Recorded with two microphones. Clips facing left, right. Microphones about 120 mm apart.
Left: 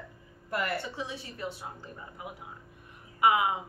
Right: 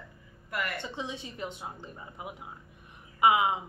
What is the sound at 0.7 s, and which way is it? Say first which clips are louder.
A woman's voice: left 1 dB; 20° right (ahead or behind).